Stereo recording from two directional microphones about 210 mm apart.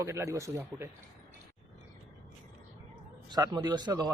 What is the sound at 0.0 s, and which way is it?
Speech, 15° right (ahead or behind).